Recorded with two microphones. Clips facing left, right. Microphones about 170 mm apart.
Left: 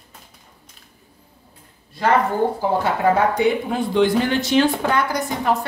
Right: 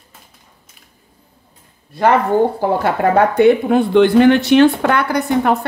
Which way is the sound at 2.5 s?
60° right (ahead or behind).